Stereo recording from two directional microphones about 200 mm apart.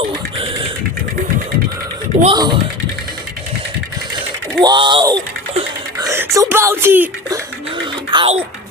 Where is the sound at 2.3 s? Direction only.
20° right (ahead or behind).